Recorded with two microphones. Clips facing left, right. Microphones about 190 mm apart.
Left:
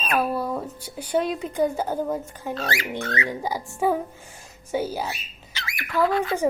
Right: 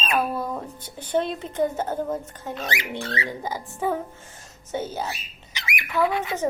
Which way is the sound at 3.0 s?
30° right (ahead or behind).